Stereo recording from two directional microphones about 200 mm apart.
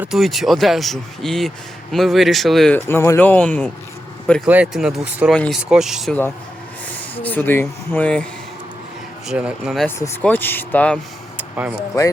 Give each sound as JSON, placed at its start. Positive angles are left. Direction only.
{"t": 0.0, "sound": "a man's voice", "side_deg": 0}
{"t": 4.4, "sound": "a man's voice", "side_deg": -5}
{"t": 7.2, "sound": "a man's voice", "side_deg": 10}
{"t": 9.8, "sound": "speech", "side_deg": 10}
{"t": 11.3, "sound": "a sound", "side_deg": -10}
{"t": 11.9, "sound": "speech", "side_deg": 15}